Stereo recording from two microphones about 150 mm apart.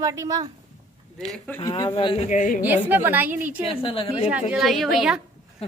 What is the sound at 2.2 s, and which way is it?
Speech, 55° left (ahead or behind).